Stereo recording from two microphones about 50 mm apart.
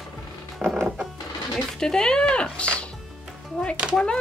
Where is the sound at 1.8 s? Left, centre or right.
Centre.